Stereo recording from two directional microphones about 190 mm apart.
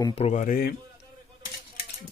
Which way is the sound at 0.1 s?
35° left (ahead or behind).